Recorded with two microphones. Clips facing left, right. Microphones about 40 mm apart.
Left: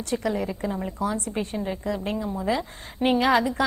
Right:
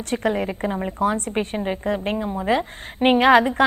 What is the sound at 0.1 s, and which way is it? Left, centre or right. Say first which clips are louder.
A woman's voice: right 4 dB; right.